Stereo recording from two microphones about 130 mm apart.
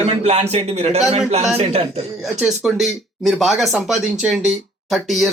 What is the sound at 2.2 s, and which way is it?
Speech, 5° right (ahead or behind).